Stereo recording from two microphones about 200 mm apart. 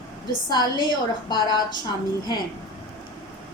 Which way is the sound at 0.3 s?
20° left (ahead or behind).